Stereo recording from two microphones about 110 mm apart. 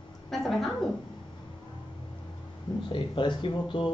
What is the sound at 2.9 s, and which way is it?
Speech, 50° left (ahead or behind).